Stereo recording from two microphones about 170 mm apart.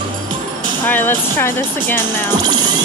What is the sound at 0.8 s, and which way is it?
Speech, 10° left (ahead or behind).